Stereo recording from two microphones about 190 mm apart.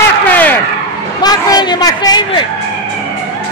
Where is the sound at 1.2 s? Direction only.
20° left (ahead or behind).